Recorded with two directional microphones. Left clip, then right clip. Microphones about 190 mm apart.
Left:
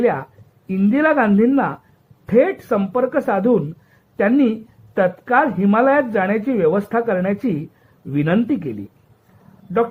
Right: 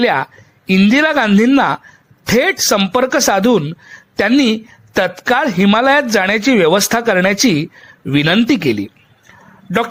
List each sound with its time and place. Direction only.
0.0 s speech: 40° right (ahead or behind)